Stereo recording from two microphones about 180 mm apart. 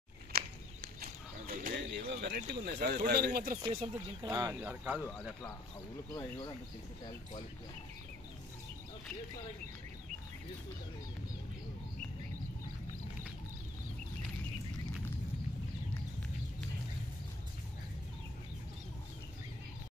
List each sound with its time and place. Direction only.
0.3 s a sound: 55° right (ahead or behind)
1.4 s bird: 55° right (ahead or behind)
3.1 s speech: 60° right (ahead or behind)
3.6 s speech: 30° right (ahead or behind)
4.3 s speech: 15° right (ahead or behind)